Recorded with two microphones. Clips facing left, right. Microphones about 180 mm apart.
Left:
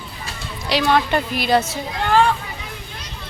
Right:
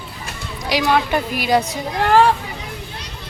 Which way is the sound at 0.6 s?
10° right (ahead or behind).